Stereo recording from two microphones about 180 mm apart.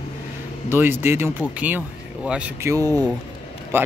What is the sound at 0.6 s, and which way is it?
Speech, 10° right (ahead or behind).